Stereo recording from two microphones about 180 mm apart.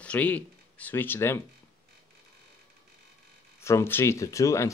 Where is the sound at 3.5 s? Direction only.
15° left (ahead or behind).